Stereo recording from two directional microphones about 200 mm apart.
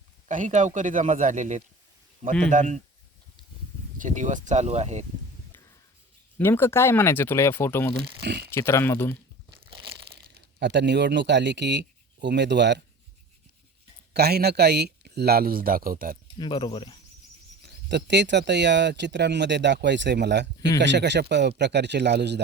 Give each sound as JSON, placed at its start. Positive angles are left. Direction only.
{"t": 0.3, "sound": "a man's voice", "side_deg": -40}
{"t": 3.9, "sound": "a man's voice", "side_deg": -40}
{"t": 6.4, "sound": "speech", "side_deg": 10}
{"t": 8.2, "sound": "speech", "side_deg": -55}
{"t": 8.4, "sound": "speech", "side_deg": 10}
{"t": 9.6, "sound": "crushing", "side_deg": -25}
{"t": 10.2, "sound": "speech", "side_deg": -60}
{"t": 14.1, "sound": "speech", "side_deg": -50}
{"t": 16.4, "sound": "speech", "side_deg": 20}
{"t": 17.6, "sound": "speech", "side_deg": -60}